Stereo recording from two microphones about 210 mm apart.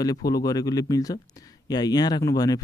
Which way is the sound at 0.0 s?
15° left (ahead or behind).